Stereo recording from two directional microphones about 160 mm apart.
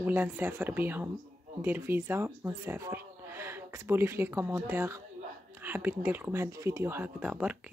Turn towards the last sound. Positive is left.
turn(degrees=-5)  # may be behind; listen again after turning